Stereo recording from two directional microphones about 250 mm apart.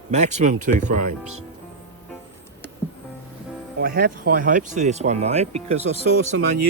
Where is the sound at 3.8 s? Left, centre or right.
Right.